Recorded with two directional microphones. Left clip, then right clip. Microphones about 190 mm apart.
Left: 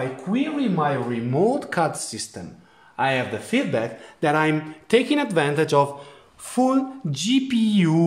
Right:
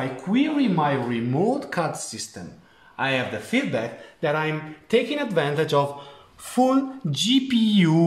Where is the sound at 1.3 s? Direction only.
40° left (ahead or behind).